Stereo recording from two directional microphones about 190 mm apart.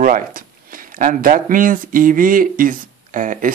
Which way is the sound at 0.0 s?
45° right (ahead or behind).